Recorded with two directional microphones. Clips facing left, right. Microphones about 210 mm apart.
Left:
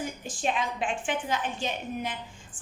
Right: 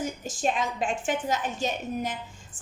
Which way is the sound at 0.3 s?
40° right (ahead or behind).